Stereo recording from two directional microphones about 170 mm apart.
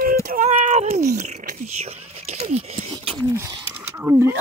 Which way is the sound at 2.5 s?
40° right (ahead or behind).